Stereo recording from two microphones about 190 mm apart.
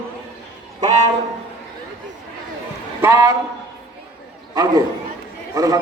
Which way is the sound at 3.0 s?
15° right (ahead or behind).